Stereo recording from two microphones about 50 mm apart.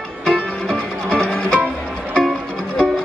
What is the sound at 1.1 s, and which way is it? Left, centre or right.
Music, centre.